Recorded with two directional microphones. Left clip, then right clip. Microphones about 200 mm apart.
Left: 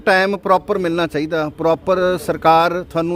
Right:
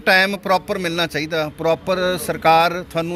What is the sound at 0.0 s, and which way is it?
A man's voice, 40° left (ahead or behind).